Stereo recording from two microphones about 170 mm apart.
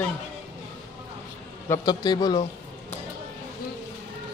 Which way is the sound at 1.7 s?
25° left (ahead or behind).